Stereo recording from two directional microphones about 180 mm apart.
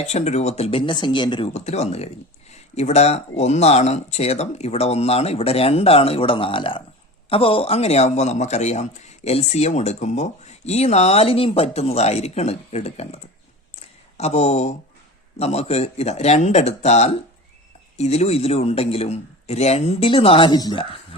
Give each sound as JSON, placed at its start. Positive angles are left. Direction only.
{"t": 0.0, "sound": "speech", "side_deg": 40}
{"t": 13.7, "sound": "a sound", "side_deg": 35}
{"t": 15.4, "sound": "speech", "side_deg": 35}